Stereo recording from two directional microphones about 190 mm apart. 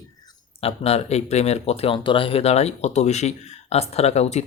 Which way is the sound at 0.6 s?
30° left (ahead or behind).